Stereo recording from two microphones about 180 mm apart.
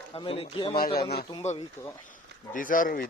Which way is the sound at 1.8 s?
10° left (ahead or behind).